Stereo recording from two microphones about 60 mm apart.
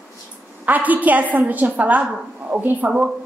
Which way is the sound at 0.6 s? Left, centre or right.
Right.